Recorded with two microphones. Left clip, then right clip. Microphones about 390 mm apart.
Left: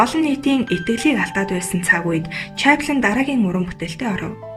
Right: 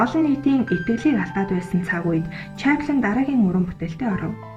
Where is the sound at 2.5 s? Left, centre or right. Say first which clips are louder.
Left 5 dB; centre.